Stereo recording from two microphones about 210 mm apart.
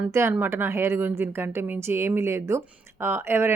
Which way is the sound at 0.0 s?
10° right (ahead or behind).